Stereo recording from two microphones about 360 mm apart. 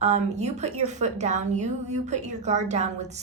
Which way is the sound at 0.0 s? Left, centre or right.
Centre.